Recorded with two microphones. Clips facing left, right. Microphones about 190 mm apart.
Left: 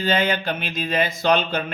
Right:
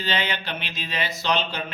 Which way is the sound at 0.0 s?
45° left (ahead or behind).